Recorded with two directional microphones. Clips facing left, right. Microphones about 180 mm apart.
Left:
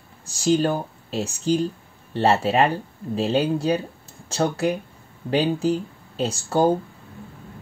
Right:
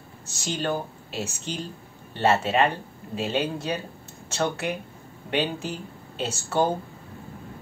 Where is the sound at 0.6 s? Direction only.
35° left (ahead or behind).